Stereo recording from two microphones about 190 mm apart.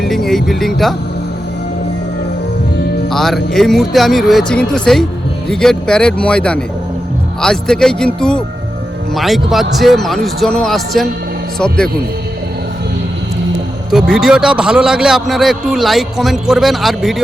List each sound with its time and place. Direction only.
0.0 s speech: centre (ahead or behind)
3.1 s a man's voice: centre (ahead or behind)
13.9 s a man's voice: 5° right (ahead or behind)